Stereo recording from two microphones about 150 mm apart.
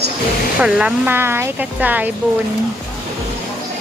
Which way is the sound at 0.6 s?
5° right (ahead or behind).